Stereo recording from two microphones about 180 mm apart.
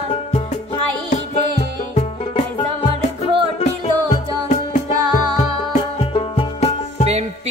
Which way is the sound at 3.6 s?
35° left (ahead or behind).